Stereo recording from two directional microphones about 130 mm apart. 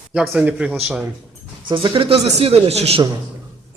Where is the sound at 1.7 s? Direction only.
40° right (ahead or behind).